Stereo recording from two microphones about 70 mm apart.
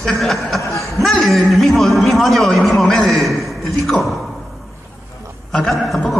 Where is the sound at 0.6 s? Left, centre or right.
Left.